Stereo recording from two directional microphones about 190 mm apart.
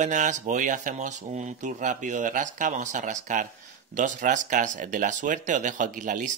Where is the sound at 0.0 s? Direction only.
40° right (ahead or behind).